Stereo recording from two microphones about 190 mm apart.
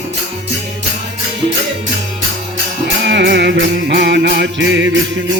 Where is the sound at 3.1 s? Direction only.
65° right (ahead or behind).